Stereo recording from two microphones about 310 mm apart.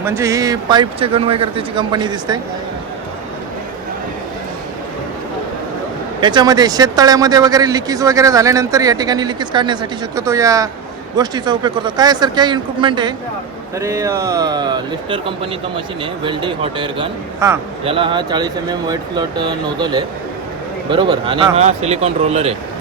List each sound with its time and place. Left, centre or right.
0.0 s a man's voice: centre
6.1 s a man's voice: centre
16.2 s a man's voice: centre